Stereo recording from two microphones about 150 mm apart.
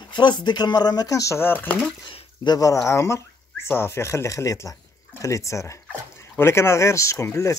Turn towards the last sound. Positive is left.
turn(degrees=20)  # may be behind; listen again after turning